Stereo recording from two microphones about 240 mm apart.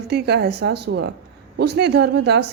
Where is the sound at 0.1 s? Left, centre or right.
Right.